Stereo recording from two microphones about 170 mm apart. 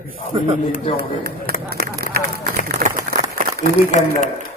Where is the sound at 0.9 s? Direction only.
65° right (ahead or behind).